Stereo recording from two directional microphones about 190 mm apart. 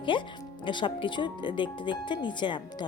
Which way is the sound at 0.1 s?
25° left (ahead or behind).